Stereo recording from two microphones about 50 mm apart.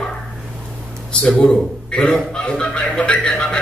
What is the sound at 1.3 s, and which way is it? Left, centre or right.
Speech, left.